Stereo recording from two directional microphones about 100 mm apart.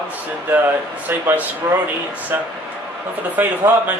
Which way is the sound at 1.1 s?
15° right (ahead or behind).